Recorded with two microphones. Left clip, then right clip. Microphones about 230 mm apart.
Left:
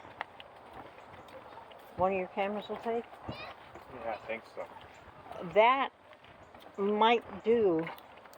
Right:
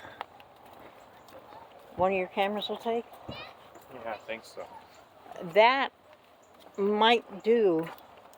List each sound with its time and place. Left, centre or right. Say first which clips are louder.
2.0 s speech: right 4 dB; right
3.2 s a sound: right 1 dB; right
4.0 s speech: even; centre